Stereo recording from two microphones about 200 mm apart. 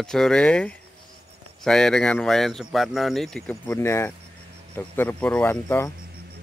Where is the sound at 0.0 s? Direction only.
5° left (ahead or behind).